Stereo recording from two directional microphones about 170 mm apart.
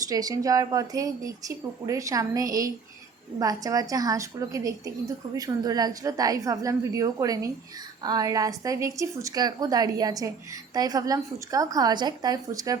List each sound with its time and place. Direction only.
0.1 s a woman's voice: 20° right (ahead or behind)